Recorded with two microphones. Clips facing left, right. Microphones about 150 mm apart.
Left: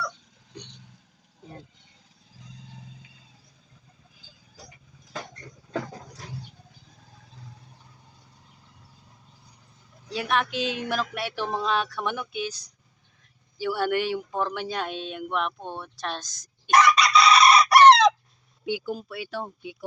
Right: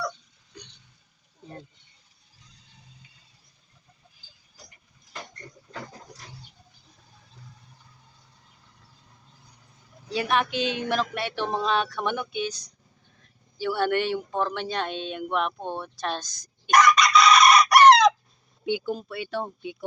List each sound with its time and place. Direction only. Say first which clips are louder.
0.5 s hiccup: left 4 dB; 30° left (ahead or behind)
10.1 s speech: right 2 dB; centre (ahead or behind)
16.7 s chicken: even; 30° left (ahead or behind)
18.6 s speech: right 2 dB; 5° left (ahead or behind)